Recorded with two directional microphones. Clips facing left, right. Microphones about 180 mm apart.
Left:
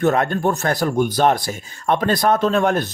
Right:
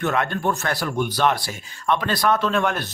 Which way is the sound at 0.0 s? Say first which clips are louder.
Left 5 dB; 40° left (ahead or behind).